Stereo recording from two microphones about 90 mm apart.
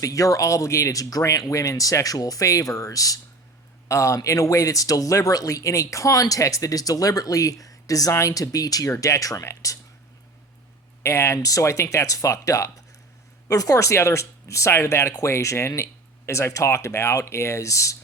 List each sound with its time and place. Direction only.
0.0 s speech: 40° left (ahead or behind)
11.0 s speech: 30° left (ahead or behind)